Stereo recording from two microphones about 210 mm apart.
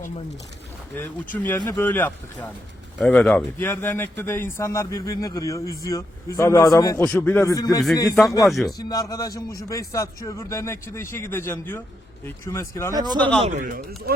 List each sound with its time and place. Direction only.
0.9 s speech: 10° left (ahead or behind)
8.4 s a man's voice: centre (ahead or behind)
8.8 s speech: 15° left (ahead or behind)
12.9 s speech: 20° right (ahead or behind)
13.1 s speech: 5° left (ahead or behind)
13.4 s a man's voice: 35° right (ahead or behind)